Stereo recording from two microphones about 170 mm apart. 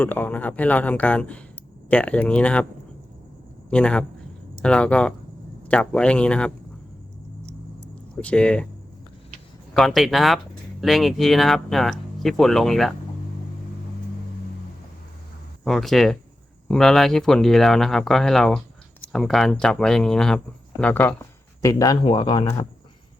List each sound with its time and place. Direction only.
0.0 s a man's voice: 10° left (ahead or behind)
3.7 s a man's voice: 5° left (ahead or behind)
8.1 s a man's voice: 5° left (ahead or behind)
9.7 s speech: centre (ahead or behind)
15.6 s a man's voice: centre (ahead or behind)
21.6 s speech: 20° left (ahead or behind)